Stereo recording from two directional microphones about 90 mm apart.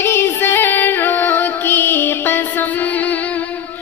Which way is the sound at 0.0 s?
25° left (ahead or behind).